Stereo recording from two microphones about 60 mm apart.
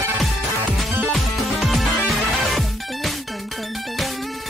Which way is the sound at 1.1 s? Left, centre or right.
Centre.